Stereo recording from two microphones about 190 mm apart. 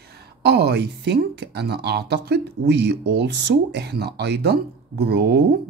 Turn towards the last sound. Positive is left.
turn(degrees=-60)  # may be behind; listen again after turning